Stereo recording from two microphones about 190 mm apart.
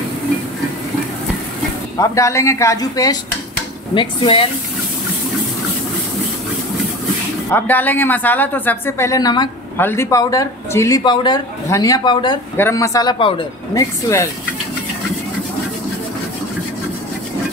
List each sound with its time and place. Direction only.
2.0 s speech: 15° left (ahead or behind)
7.5 s speech: 10° left (ahead or behind)